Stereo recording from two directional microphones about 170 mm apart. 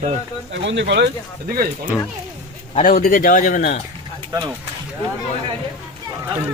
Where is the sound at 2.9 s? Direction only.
55° left (ahead or behind).